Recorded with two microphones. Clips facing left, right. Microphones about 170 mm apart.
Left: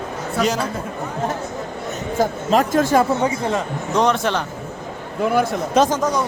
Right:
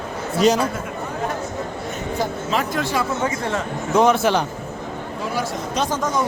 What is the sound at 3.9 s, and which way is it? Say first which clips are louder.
Speech: right 2 dB; 5° right (ahead or behind).